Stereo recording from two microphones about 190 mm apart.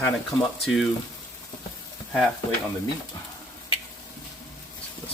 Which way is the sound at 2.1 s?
5° left (ahead or behind).